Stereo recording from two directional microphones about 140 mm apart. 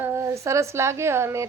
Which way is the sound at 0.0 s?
20° right (ahead or behind).